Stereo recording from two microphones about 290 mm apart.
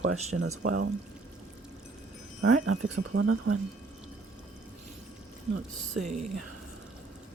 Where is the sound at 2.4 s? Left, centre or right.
Right.